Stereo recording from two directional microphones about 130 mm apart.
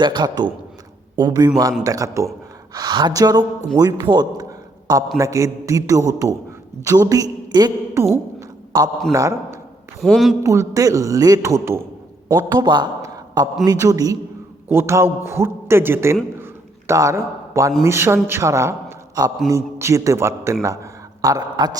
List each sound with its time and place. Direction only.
0.0 s a man's voice: 35° right (ahead or behind)
5.1 s a man's voice: 25° right (ahead or behind)
8.4 s a sound: 25° right (ahead or behind)
9.1 s a man's voice: 25° right (ahead or behind)
10.0 s a man's voice: centre (ahead or behind)
10.4 s a man's voice: 25° right (ahead or behind)
12.5 s a man's voice: 35° right (ahead or behind); by 16.1 s 20° right (ahead or behind)
16.4 s a sound: 20° right (ahead or behind)
17.8 s a man's voice: 20° right (ahead or behind)